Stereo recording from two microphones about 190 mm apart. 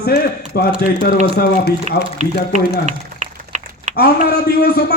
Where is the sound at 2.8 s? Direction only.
40° right (ahead or behind).